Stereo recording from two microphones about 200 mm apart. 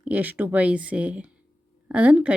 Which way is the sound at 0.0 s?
10° right (ahead or behind).